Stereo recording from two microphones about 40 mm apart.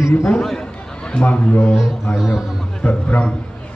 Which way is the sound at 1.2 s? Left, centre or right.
Left.